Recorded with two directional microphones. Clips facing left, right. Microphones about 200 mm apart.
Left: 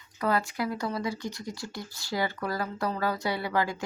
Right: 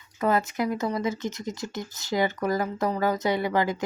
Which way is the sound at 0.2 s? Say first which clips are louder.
Right 4 dB; 20° right (ahead or behind).